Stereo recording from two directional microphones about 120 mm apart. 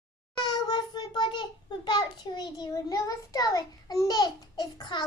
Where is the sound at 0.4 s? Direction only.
40° left (ahead or behind).